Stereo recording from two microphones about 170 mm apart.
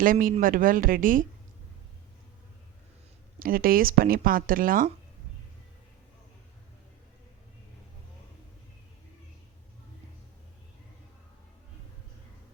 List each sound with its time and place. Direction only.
0.0 s speech: 55° right (ahead or behind)
3.3 s speech: 60° right (ahead or behind)